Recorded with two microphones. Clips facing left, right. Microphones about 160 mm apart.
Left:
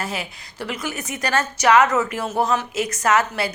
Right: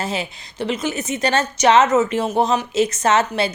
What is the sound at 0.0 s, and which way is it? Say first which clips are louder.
A woman's voice: right 4 dB; 25° right (ahead or behind).